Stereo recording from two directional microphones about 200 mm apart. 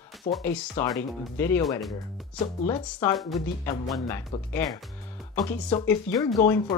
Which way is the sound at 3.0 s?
10° left (ahead or behind).